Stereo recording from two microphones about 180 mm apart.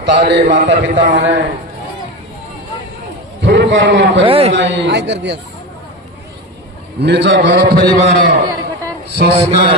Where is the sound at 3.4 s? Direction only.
85° right.